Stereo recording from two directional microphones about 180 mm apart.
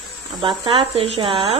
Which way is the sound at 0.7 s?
35° right (ahead or behind).